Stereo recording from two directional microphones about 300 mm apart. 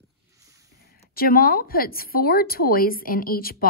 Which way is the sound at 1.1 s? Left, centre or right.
Left.